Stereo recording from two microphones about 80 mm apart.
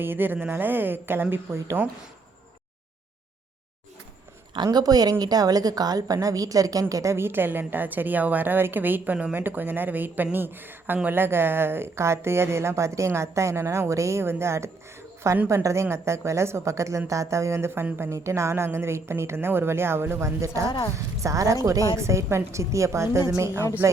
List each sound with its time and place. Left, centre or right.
0.0 s speech: right
1.8 s speech: left
4.5 s a woman's voice: right
18.1 s a woman's voice: right